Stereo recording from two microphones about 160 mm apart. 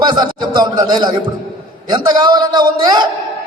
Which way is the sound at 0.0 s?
25° right (ahead or behind).